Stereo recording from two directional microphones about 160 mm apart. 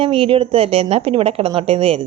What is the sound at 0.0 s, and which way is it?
A woman's voice, 35° right (ahead or behind).